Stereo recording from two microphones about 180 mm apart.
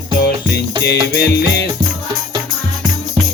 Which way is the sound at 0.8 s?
65° left (ahead or behind).